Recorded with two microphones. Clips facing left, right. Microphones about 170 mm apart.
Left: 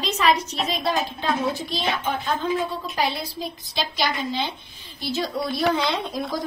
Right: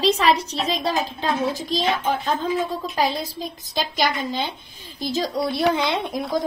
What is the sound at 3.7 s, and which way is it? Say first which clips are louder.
Speech: right 3 dB; 45° right (ahead or behind).